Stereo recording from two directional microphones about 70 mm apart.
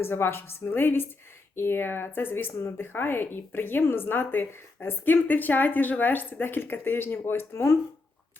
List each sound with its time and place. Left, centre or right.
0.0 s a woman's voice: left